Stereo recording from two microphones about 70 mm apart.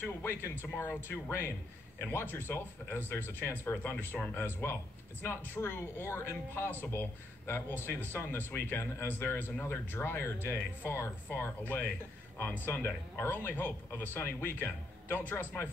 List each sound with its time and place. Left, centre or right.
0.0 s speech: left